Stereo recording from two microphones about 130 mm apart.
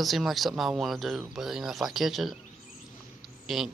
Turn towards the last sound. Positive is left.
turn(degrees=0)  # may be behind; listen again after turning